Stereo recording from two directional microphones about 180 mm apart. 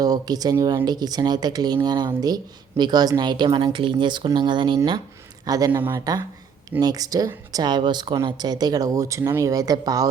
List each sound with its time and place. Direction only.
0.0 s speech: 20° right (ahead or behind)